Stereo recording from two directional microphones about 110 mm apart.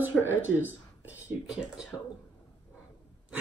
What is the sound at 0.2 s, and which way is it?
Speech, 15° right (ahead or behind).